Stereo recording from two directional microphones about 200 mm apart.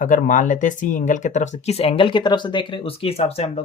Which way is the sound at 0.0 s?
40° left (ahead or behind).